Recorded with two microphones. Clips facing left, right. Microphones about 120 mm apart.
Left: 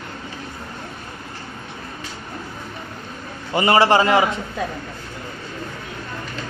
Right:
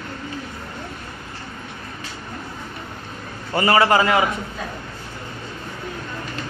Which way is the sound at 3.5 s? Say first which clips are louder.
Left 1 dB; 25° left (ahead or behind).